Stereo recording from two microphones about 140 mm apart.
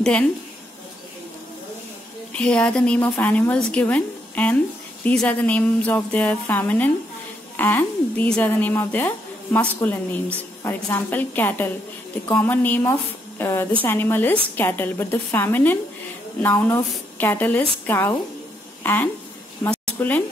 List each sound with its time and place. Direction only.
2.3 s a woman's voice: 10° left (ahead or behind)